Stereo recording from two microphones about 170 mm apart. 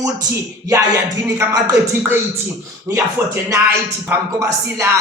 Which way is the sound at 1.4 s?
15° right (ahead or behind).